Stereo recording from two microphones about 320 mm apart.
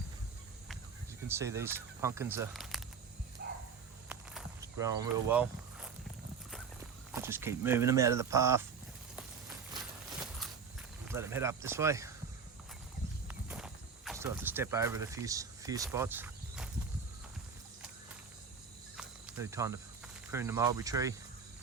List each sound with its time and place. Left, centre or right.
1.3 s speech: centre
3.4 s a sound: right
4.1 s a sound: centre
7.1 s speech: centre
11.1 s speech: centre
13.2 s walk: centre
18.9 s cricket: centre
20.3 s speech: centre